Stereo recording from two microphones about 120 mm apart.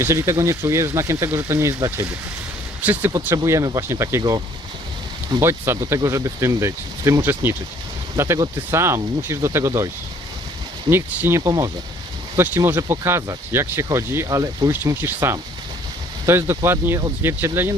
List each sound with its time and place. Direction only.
0.0 s speech: 25° right (ahead or behind)
3.3 s speech: 25° right (ahead or behind)
5.4 s speech: 20° right (ahead or behind)